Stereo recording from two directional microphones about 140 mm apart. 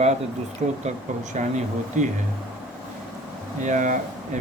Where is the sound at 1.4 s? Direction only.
60° right (ahead or behind).